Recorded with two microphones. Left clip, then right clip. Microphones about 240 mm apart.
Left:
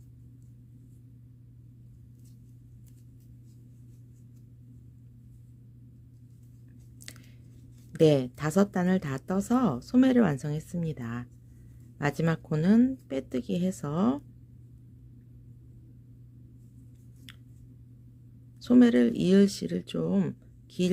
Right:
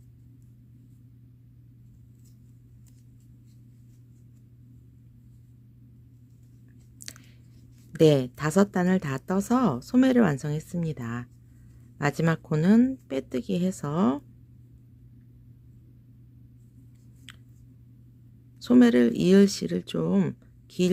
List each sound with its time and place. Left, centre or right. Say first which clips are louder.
7.1 s a sound: right 4 dB; centre
7.9 s speech: right 2 dB; centre
18.6 s speech: right 2 dB; centre